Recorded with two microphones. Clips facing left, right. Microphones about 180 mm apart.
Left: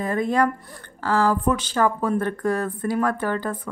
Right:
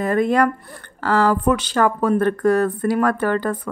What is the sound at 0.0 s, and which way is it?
Speech, 70° right (ahead or behind).